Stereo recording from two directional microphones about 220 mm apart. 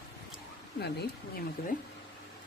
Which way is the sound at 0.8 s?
50° left (ahead or behind).